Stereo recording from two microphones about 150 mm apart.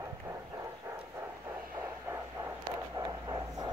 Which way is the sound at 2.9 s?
25° right (ahead or behind).